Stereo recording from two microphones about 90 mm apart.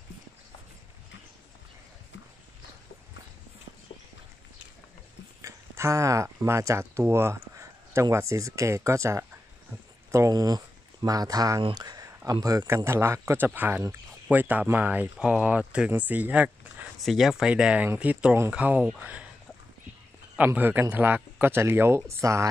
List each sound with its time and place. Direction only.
5.4 s speech: 35° right (ahead or behind)
12.6 s speech: 30° right (ahead or behind)
17.0 s speech: centre (ahead or behind)
20.3 s speech: 20° right (ahead or behind); by 22.5 s 35° right (ahead or behind)